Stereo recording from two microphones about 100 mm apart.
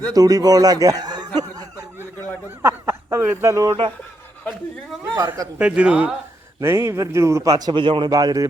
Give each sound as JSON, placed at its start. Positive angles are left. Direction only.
{"t": 0.1, "sound": "speech", "side_deg": -40}
{"t": 2.6, "sound": "speech", "side_deg": -25}
{"t": 5.1, "sound": "a man's voice", "side_deg": -20}
{"t": 6.6, "sound": "speech", "side_deg": -25}
{"t": 7.7, "sound": "speech", "side_deg": -55}
{"t": 8.1, "sound": "speech", "side_deg": -40}